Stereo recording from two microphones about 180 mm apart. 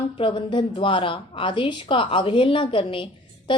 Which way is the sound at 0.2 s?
30° left (ahead or behind).